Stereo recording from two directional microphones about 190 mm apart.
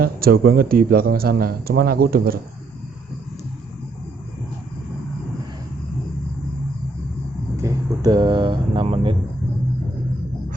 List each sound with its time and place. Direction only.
0.0 s a man's voice: 50° right (ahead or behind)
7.5 s speech: 20° right (ahead or behind)